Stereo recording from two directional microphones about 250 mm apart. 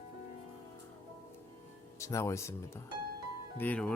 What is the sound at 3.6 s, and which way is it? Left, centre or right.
Speech, centre.